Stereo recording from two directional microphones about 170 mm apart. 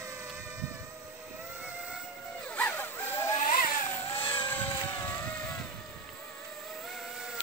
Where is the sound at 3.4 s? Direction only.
50° left (ahead or behind).